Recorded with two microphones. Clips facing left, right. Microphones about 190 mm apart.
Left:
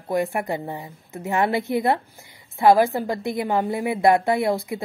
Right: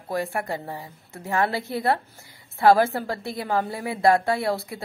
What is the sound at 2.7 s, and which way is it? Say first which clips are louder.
A woman's voice: left 2 dB; 15° left (ahead or behind).